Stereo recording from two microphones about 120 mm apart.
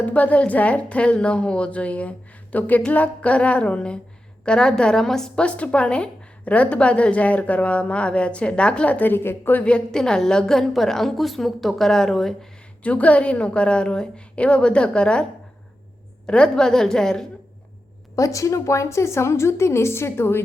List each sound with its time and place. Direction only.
0.0 s a woman's voice: 10° left (ahead or behind)
18.2 s a woman's voice: 25° left (ahead or behind)